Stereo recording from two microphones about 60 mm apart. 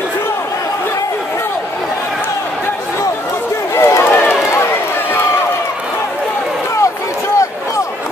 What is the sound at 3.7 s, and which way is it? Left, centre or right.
Run, left.